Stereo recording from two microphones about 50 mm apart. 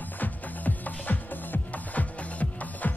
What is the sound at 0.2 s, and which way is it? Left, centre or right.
Music, left.